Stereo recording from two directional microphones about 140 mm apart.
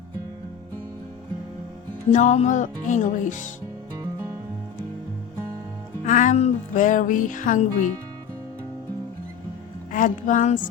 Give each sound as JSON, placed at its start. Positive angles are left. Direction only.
{"t": 2.1, "sound": "music", "side_deg": 55}
{"t": 3.9, "sound": "music", "side_deg": -25}
{"t": 6.1, "sound": "music", "side_deg": 65}
{"t": 9.9, "sound": "music", "side_deg": 70}